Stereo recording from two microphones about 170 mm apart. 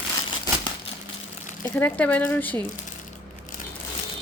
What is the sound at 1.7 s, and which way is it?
Speech, 10° left (ahead or behind).